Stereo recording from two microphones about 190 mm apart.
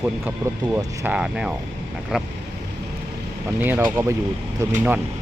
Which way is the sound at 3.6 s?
10° right (ahead or behind).